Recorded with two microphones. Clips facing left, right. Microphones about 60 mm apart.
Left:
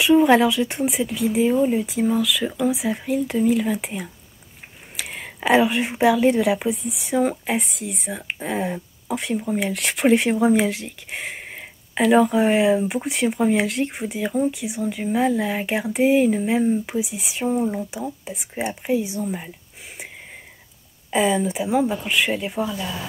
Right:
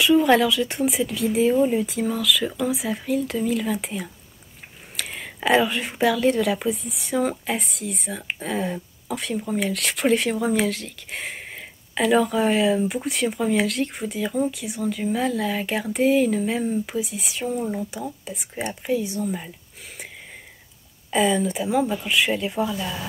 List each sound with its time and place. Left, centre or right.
0.0 s speech: centre
21.1 s speech: centre